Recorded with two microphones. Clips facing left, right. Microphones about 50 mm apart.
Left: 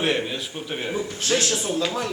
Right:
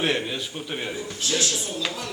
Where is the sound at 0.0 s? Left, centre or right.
Centre.